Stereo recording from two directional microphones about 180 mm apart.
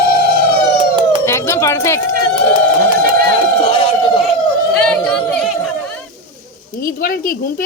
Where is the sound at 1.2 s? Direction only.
15° left (ahead or behind).